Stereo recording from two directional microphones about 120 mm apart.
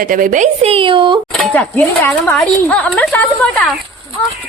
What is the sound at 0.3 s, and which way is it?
Speech, 85° right.